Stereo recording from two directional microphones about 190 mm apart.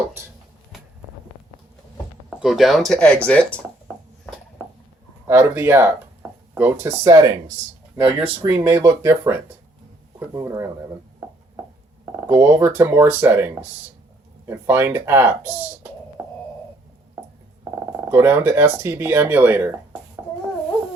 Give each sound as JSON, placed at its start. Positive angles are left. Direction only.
{"t": 2.3, "sound": "speech", "side_deg": 0}
{"t": 5.3, "sound": "speech", "side_deg": -10}
{"t": 8.4, "sound": "speech", "side_deg": -15}
{"t": 12.3, "sound": "speech", "side_deg": -10}
{"t": 16.2, "sound": "a sound", "side_deg": -10}
{"t": 18.1, "sound": "speech", "side_deg": -10}